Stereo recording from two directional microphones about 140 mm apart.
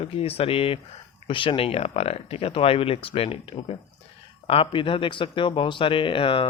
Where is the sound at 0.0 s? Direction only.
45° left (ahead or behind).